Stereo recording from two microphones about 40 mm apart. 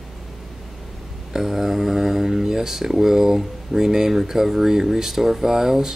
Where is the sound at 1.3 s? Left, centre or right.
Centre.